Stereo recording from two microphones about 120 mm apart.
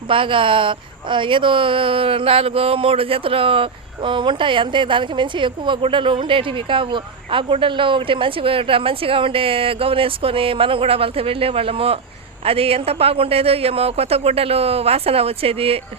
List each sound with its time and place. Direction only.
0.1 s a man's voice: 45° right (ahead or behind)